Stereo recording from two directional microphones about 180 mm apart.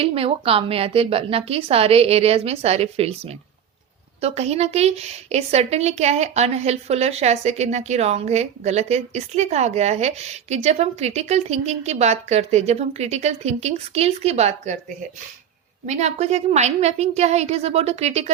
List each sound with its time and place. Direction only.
0.0 s a woman's voice: 30° right (ahead or behind)
15.9 s a woman's voice: 40° right (ahead or behind)